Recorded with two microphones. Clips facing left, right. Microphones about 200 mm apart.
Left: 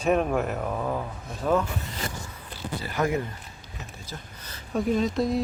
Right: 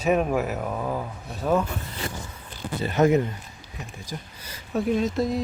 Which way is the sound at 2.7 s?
25° right (ahead or behind).